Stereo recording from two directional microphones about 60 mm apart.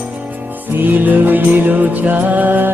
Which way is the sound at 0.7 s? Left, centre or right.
Right.